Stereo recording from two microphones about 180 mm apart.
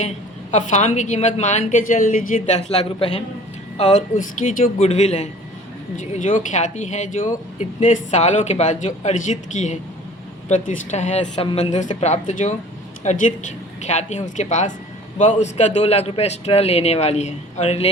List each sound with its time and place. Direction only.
0.5 s a woman's voice: 40° left (ahead or behind)